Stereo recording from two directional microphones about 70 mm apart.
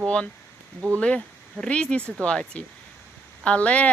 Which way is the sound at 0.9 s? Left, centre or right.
Centre.